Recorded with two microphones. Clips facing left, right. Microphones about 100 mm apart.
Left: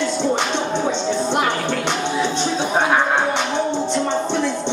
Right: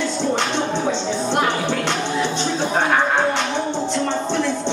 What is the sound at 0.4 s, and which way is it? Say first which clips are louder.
Music: even; 15° left (ahead or behind).